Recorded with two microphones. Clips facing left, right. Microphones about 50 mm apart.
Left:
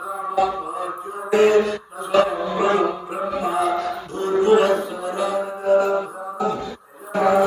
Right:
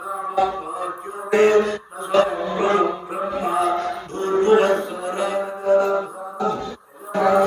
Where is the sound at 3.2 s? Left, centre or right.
Right.